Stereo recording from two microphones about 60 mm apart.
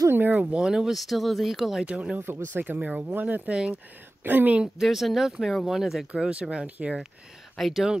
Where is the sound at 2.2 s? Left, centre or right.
Right.